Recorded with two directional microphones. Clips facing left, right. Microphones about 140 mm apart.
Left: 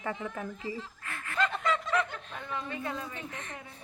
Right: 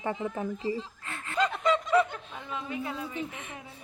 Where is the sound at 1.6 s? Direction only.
15° right (ahead or behind).